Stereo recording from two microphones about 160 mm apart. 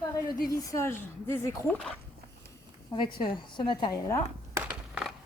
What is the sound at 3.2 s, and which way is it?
Speech, 30° left (ahead or behind).